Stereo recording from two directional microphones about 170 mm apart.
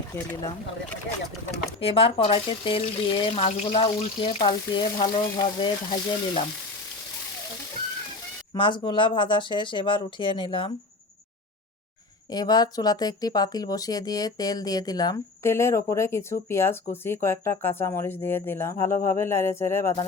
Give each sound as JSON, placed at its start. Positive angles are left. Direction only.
{"t": 1.8, "sound": "speech", "side_deg": 35}
{"t": 8.5, "sound": "speech", "side_deg": 30}
{"t": 12.3, "sound": "speech", "side_deg": 25}